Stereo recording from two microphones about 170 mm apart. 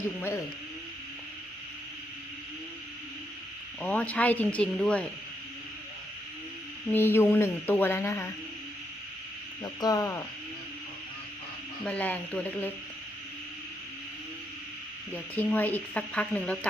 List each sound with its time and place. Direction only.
3.8 s speech: 10° left (ahead or behind)
6.9 s speech: 15° left (ahead or behind)
9.8 s speech: 20° left (ahead or behind)
11.9 s speech: 10° left (ahead or behind)
15.1 s speech: 10° left (ahead or behind)